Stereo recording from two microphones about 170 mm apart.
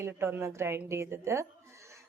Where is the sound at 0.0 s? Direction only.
15° right (ahead or behind).